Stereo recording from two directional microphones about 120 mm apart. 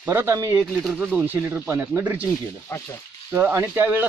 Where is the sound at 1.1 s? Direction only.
15° right (ahead or behind).